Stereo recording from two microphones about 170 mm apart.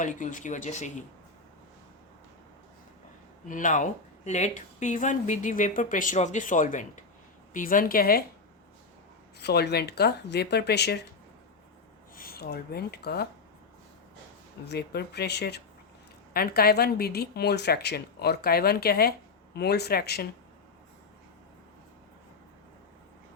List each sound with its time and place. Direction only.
0.0 s speech: 50° left (ahead or behind)
3.4 s a woman's voice: 50° left (ahead or behind)
9.4 s a woman's voice: 75° left (ahead or behind)
12.1 s speech: 60° left (ahead or behind)
14.7 s a woman's voice: 75° left (ahead or behind)
16.3 s a woman's voice: 65° left (ahead or behind)